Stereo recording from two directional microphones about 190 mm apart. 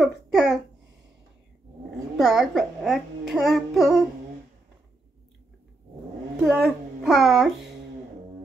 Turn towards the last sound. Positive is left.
turn(degrees=0)  # may be behind; listen again after turning